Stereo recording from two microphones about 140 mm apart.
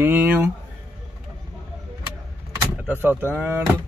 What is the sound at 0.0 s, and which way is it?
Speech, 15° right (ahead or behind).